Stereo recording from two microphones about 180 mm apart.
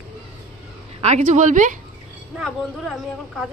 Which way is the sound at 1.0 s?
40° right (ahead or behind).